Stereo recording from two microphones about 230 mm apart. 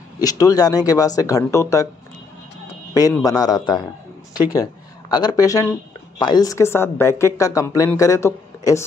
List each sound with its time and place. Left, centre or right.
0.2 s speech: centre
2.9 s speech: centre